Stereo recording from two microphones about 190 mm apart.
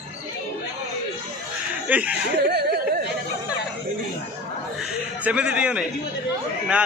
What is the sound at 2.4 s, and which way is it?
Speech, 55° right (ahead or behind).